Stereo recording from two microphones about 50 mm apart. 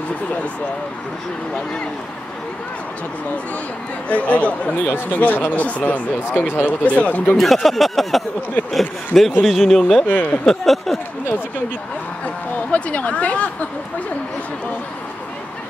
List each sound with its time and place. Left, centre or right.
4.1 s speech: left
5.1 s speech: left
6.3 s speech: left
6.6 s speech: left
7.3 s speech: centre
10.0 s speech: left
10.4 s speech: centre
12.7 s speech: left